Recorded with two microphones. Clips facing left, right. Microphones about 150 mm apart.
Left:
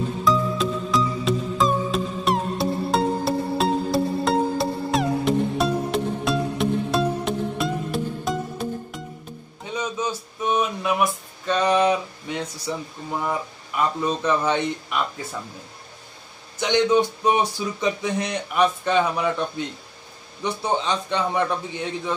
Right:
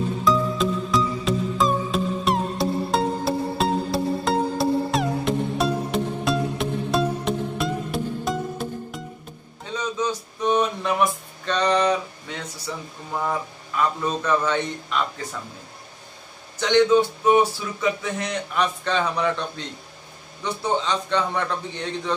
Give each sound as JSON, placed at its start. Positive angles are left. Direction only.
{"t": 0.2, "sound": "music", "side_deg": 0}
{"t": 9.7, "sound": "a sound", "side_deg": 10}
{"t": 13.3, "sound": "speech", "side_deg": 15}
{"t": 16.5, "sound": "speech", "side_deg": 15}